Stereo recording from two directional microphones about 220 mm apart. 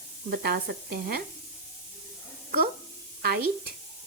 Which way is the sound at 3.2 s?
45° right (ahead or behind).